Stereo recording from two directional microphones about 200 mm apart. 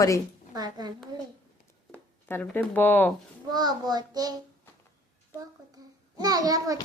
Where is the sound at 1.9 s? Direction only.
5° left (ahead or behind).